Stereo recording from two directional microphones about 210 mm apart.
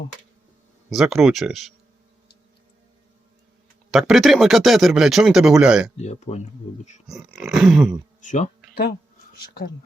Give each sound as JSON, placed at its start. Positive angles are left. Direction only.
{"t": 0.9, "sound": "speech", "side_deg": 0}
{"t": 3.9, "sound": "speech", "side_deg": 0}
{"t": 6.0, "sound": "speech", "side_deg": 30}
{"t": 7.1, "sound": "speech", "side_deg": 0}
{"t": 8.2, "sound": "speech", "side_deg": 35}
{"t": 8.7, "sound": "speech", "side_deg": 50}